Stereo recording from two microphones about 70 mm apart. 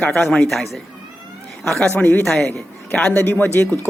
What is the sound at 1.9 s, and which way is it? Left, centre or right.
Speech, left.